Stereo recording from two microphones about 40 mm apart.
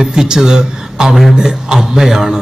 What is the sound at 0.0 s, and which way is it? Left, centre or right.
A man's voice, centre.